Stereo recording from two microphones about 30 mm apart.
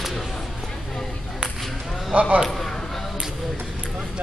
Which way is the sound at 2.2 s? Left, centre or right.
Right.